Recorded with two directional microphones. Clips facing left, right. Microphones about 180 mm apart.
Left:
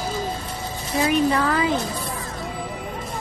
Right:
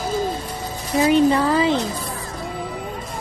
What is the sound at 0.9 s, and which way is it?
Speech, 30° right (ahead or behind).